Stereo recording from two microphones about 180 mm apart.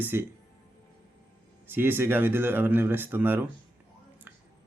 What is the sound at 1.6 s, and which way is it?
Speech, 10° right (ahead or behind).